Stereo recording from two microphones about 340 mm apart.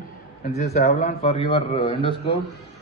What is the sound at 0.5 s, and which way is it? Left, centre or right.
Speech, centre.